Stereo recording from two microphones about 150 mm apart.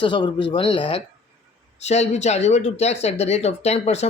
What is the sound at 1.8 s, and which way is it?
Speech, 45° left (ahead or behind).